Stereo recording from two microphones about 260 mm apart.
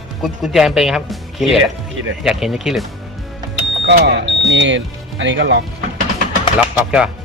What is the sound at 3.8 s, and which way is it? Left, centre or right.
Speech, right.